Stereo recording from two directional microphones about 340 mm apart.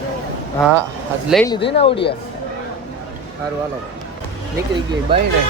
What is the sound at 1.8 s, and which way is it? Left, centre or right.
Speech, centre.